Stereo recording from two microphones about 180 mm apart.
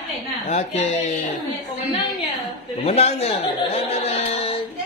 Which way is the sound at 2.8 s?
35° left (ahead or behind).